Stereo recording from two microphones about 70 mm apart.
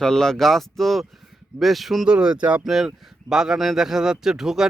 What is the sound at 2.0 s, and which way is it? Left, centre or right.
Speech, centre.